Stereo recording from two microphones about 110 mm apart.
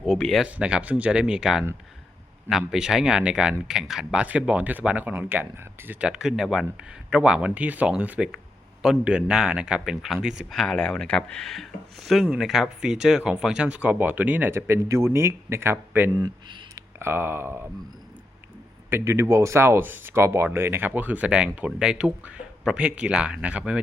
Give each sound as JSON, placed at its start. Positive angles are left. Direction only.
{"t": 0.0, "sound": "speech", "side_deg": 5}
{"t": 0.4, "sound": "speech", "side_deg": -10}
{"t": 10.6, "sound": "speech", "side_deg": 5}
{"t": 16.1, "sound": "a sound", "side_deg": -35}
{"t": 17.0, "sound": "speech", "side_deg": -20}
{"t": 18.9, "sound": "speech", "side_deg": -25}